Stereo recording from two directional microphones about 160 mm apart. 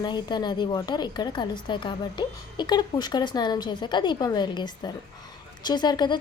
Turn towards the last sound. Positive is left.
turn(degrees=25)  # may be behind; listen again after turning